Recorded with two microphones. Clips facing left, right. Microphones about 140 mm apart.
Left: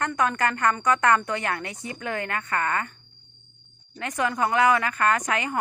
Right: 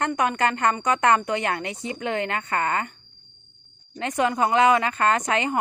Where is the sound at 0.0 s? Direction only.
20° right (ahead or behind).